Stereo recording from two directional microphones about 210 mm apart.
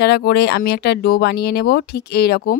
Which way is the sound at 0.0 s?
50° left (ahead or behind).